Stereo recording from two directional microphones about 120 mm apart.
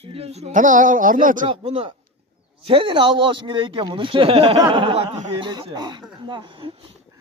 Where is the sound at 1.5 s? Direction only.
55° right (ahead or behind).